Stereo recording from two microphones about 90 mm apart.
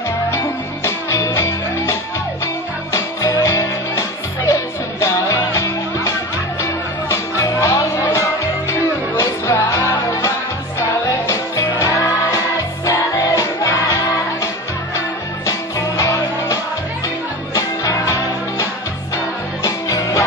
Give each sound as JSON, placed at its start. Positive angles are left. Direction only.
{"t": 1.3, "sound": "music", "side_deg": 30}
{"t": 5.0, "sound": "music", "side_deg": 30}
{"t": 16.0, "sound": "music", "side_deg": 35}
{"t": 17.6, "sound": "music", "side_deg": 35}
{"t": 19.1, "sound": "music", "side_deg": 35}